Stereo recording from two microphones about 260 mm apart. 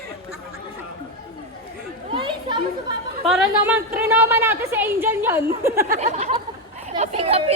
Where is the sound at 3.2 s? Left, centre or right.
Centre.